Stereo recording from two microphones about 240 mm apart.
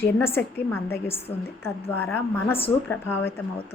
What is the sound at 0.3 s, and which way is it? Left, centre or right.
A woman's voice, centre.